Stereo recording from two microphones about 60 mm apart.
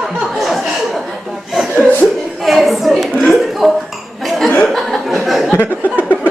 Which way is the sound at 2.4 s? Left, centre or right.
Centre.